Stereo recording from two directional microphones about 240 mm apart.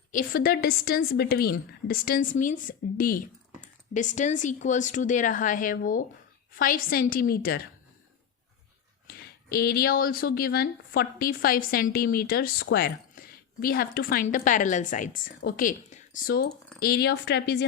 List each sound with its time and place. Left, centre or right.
0.1 s speech: left
9.0 s speech: left